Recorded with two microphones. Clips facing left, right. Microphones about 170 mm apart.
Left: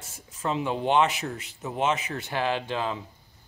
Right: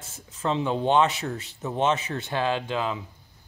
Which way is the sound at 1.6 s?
10° left (ahead or behind).